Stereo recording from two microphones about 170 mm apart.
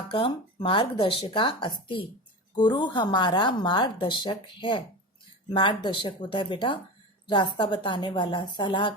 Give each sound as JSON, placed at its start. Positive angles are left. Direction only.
{"t": 0.1, "sound": "a woman's voice", "side_deg": 30}